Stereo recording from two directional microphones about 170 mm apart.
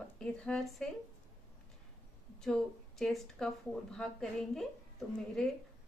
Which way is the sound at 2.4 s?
5° left (ahead or behind).